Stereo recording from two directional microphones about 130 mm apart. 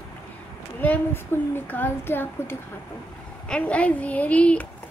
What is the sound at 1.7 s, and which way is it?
Speech, 15° left (ahead or behind).